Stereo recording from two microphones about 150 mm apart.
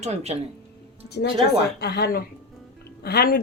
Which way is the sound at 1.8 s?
90° left.